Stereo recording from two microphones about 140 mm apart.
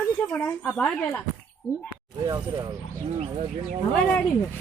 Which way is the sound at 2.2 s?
30° right (ahead or behind).